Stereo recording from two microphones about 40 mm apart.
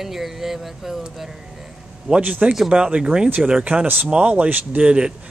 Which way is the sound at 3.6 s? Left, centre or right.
Right.